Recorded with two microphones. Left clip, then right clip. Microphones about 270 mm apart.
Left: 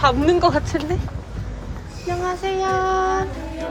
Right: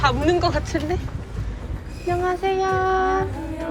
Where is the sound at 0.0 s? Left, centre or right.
Centre.